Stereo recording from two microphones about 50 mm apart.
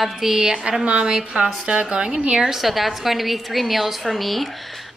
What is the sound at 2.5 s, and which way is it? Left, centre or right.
A woman's voice, centre.